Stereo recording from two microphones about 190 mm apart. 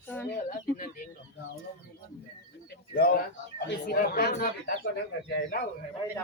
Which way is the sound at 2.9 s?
50° left (ahead or behind).